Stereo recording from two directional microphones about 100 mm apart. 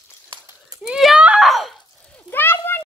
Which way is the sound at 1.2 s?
5° right (ahead or behind).